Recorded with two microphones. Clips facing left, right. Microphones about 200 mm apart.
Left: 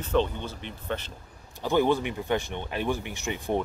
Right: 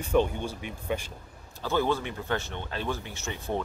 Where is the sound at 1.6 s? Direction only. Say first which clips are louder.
Left 4 dB; 15° left (ahead or behind).